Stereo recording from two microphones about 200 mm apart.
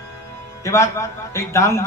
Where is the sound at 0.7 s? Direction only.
15° left (ahead or behind).